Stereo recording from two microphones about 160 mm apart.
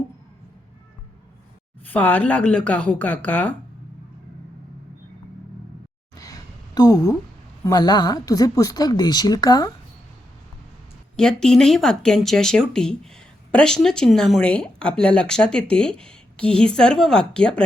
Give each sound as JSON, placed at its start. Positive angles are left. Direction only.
{"t": 1.8, "sound": "speech", "side_deg": 10}
{"t": 6.1, "sound": "a sound", "side_deg": 20}
{"t": 7.6, "sound": "a woman's voice", "side_deg": 25}
{"t": 11.2, "sound": "speech", "side_deg": 5}